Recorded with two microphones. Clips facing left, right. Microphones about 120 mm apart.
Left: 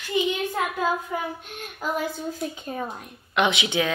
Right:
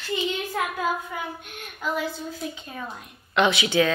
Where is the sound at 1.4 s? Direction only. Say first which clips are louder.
Even; 40° left (ahead or behind).